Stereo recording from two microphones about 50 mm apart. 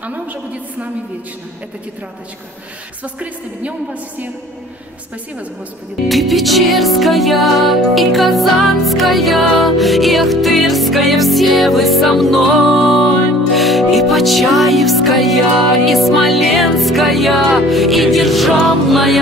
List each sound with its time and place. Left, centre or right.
0.0 s a woman's voice: right
3.0 s a woman's voice: right
6.0 s music: centre